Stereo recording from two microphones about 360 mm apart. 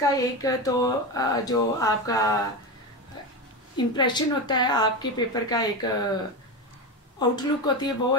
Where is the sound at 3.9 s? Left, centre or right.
Centre.